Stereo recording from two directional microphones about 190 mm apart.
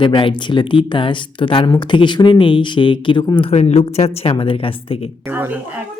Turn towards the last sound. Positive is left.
turn(degrees=-10)  # may be behind; listen again after turning